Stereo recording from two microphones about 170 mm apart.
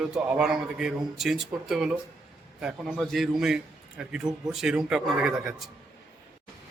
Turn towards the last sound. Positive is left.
turn(degrees=-5)  # may be behind; listen again after turning